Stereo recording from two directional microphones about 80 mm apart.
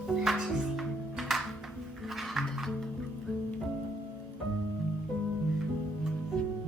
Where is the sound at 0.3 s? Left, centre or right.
Centre.